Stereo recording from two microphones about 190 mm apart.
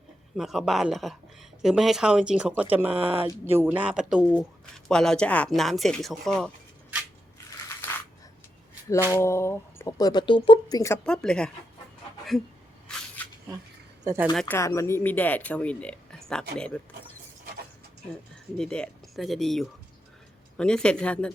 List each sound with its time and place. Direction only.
0.3 s speech: centre (ahead or behind)
2.9 s speech: 30° right (ahead or behind)
3.4 s speech: 10° right (ahead or behind)
7.8 s coin: 10° left (ahead or behind)
9.0 s speech: 15° left (ahead or behind)
11.0 s speech: 5° left (ahead or behind)
14.3 s speech: 10° left (ahead or behind)
18.5 s speech: 5° left (ahead or behind)